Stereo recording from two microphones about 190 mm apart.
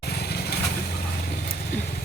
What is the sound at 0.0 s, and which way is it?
Vehicle, 55° left (ahead or behind).